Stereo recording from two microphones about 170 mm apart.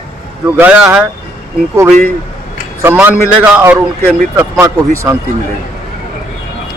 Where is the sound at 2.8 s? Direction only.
10° right (ahead or behind).